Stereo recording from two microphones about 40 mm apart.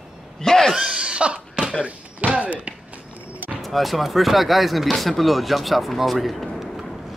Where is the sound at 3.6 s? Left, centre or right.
Centre.